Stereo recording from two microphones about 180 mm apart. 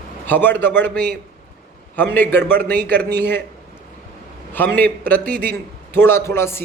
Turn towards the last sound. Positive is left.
turn(degrees=15)  # may be behind; listen again after turning